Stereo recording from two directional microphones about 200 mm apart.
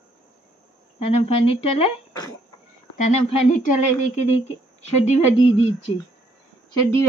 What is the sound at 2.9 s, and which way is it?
Speech, 40° left (ahead or behind).